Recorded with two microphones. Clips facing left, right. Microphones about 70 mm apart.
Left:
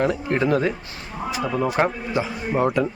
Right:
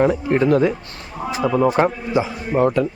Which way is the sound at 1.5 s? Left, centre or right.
Right.